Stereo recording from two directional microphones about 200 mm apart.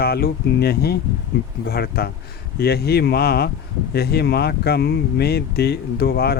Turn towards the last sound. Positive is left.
turn(degrees=50)  # may be behind; listen again after turning